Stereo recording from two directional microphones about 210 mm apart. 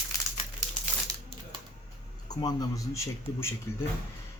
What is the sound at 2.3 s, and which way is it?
A man's voice, 20° left (ahead or behind).